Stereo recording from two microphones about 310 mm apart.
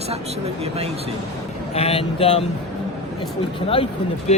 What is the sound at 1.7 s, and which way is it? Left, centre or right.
Speech, centre.